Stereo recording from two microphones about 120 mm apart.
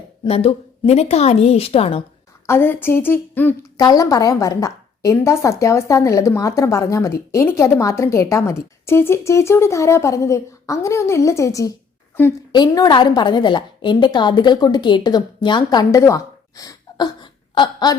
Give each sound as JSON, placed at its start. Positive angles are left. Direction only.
{"t": 0.3, "sound": "a woman's voice", "side_deg": 55}
{"t": 2.5, "sound": "a woman's voice", "side_deg": 20}
{"t": 3.8, "sound": "a woman's voice", "side_deg": 30}